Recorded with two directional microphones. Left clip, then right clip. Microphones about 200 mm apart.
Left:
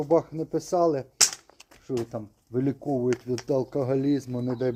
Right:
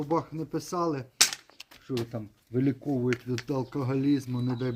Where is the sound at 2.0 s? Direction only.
Centre (ahead or behind).